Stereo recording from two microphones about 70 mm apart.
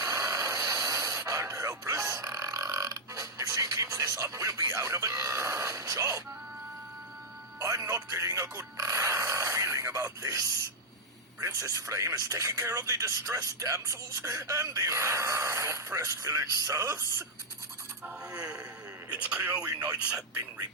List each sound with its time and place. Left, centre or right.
0.0 s a sound: right
5.6 s speech: right
7.6 s speech: right
18.3 s a sound: centre
19.2 s speech: right
20.3 s speech: right